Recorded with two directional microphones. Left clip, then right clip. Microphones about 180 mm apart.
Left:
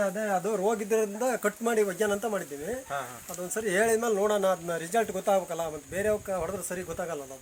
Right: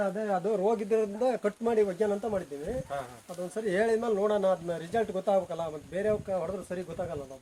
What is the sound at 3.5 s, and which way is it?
Speech, 10° right (ahead or behind).